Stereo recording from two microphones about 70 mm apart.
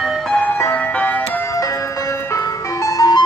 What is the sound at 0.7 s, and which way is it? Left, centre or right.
Music, left.